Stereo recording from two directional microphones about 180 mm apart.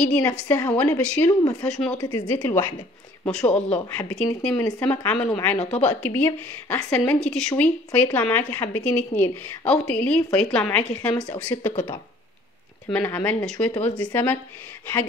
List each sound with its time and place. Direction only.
0.2 s speech: 20° left (ahead or behind)
2.0 s speech: 25° left (ahead or behind)
2.3 s speech: 10° left (ahead or behind)
4.6 s speech: 20° left (ahead or behind)
4.8 s speech: 5° left (ahead or behind)
12.9 s speech: 10° left (ahead or behind)